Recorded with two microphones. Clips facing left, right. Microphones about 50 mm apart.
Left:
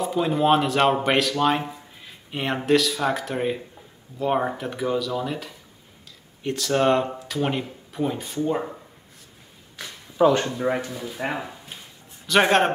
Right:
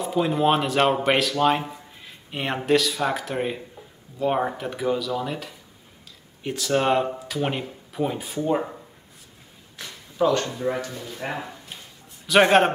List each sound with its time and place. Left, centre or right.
0.0 s speech: centre
10.1 s speech: centre
10.9 s speech: centre
12.3 s speech: centre